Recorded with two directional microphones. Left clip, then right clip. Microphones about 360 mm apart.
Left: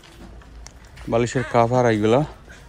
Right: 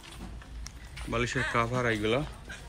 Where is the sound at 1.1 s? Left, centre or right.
Centre.